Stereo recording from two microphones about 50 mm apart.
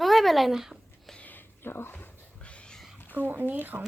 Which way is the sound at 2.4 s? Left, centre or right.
Left.